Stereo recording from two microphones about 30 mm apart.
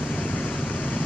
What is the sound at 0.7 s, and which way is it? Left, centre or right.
Vehicle, left.